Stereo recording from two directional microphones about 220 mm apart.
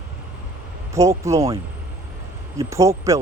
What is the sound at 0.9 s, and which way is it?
Speech, 15° right (ahead or behind).